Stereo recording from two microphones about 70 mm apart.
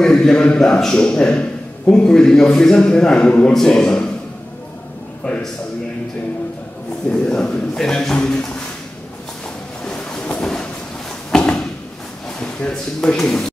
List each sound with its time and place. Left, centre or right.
0.0 s a man's voice: centre
5.2 s a man's voice: centre
7.1 s a man's voice: centre
9.8 s a sound: centre
12.4 s speech: centre